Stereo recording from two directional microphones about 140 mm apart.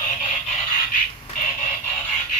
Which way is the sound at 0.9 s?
60° left (ahead or behind).